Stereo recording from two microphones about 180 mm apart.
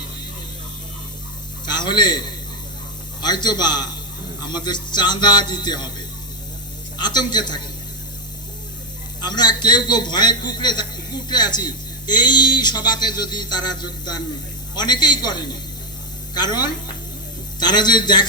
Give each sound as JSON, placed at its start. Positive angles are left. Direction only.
{"t": 1.6, "sound": "a sound", "side_deg": 25}
{"t": 3.2, "sound": "a man's voice", "side_deg": 25}
{"t": 7.0, "sound": "a man's voice", "side_deg": 25}
{"t": 9.2, "sound": "a man's voice", "side_deg": 25}